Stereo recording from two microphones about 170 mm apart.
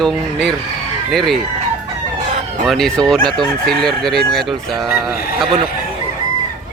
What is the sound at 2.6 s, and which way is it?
Speech, centre (ahead or behind).